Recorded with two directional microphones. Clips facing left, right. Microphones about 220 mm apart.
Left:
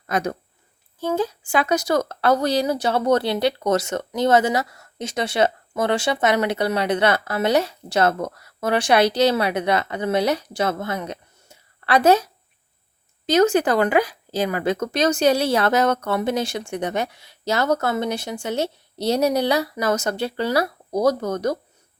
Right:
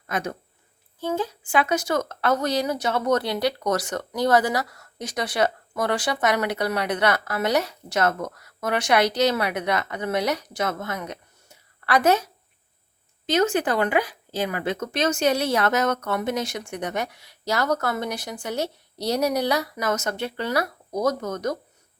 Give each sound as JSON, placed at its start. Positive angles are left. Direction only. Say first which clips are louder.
{"t": 0.1, "sound": "speech", "louder": "left 5 dB", "side_deg": 40}
{"t": 13.2, "sound": "speech", "louder": "left 5 dB", "side_deg": 40}